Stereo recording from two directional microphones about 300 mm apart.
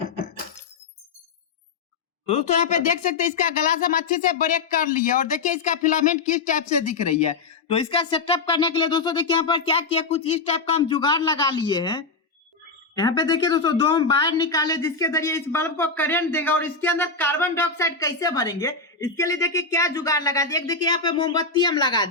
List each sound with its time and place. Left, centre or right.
2.2 s speech: left